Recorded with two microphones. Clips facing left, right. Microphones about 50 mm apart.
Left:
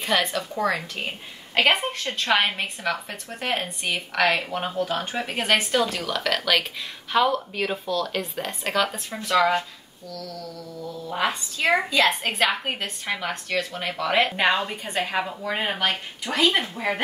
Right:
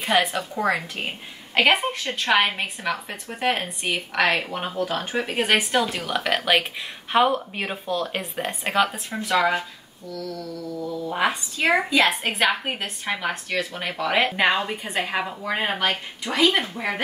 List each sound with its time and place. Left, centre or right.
0.0 s a woman's voice: centre
10.0 s speech: right
12.1 s a woman's voice: centre